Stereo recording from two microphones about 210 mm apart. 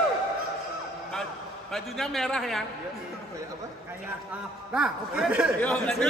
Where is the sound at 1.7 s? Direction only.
Centre (ahead or behind).